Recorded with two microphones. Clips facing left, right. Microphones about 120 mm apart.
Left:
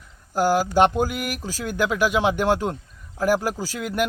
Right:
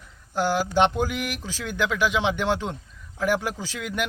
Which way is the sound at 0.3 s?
40° left (ahead or behind).